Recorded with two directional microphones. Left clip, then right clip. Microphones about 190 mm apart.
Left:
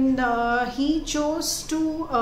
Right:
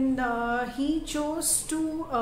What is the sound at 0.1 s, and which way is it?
A woman's voice, centre (ahead or behind).